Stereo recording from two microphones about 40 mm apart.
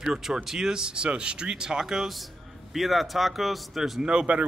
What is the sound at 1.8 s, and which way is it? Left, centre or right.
A man's voice, centre.